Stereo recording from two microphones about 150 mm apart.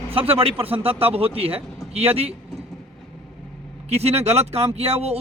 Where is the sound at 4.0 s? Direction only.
45° right (ahead or behind).